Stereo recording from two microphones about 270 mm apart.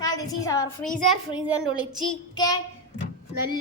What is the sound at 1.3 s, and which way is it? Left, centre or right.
Child singing, centre.